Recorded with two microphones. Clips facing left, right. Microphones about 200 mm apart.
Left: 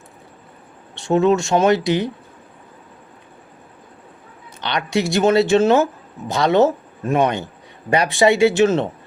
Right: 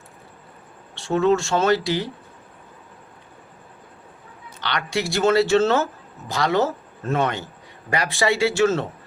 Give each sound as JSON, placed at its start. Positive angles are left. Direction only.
{"t": 0.9, "sound": "speech", "side_deg": 20}
{"t": 4.6, "sound": "speech", "side_deg": 20}